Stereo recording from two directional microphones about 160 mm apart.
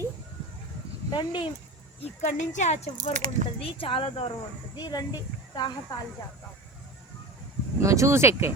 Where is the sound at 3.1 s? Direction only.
50° right (ahead or behind).